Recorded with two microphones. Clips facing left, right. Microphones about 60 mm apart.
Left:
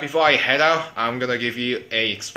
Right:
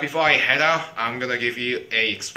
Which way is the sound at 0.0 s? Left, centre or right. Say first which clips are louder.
Left 2 dB; right.